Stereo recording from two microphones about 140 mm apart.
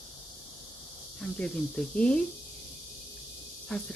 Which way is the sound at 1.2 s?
10° left (ahead or behind).